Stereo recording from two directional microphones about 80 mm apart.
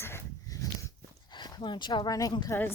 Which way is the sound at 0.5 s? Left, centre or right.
Left.